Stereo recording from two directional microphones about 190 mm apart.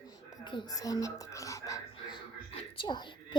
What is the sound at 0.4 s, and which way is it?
Whispering, 20° left (ahead or behind).